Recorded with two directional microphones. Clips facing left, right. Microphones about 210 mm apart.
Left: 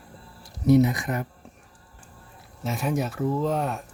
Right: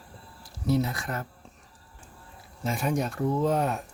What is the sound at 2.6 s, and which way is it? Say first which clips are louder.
Speech: left 1 dB; centre (ahead or behind).